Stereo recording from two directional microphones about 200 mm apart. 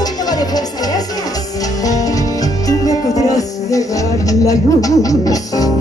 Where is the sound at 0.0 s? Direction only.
20° left (ahead or behind).